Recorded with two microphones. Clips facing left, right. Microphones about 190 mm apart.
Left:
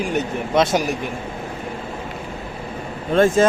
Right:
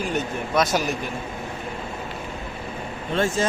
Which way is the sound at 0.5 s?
25° left (ahead or behind).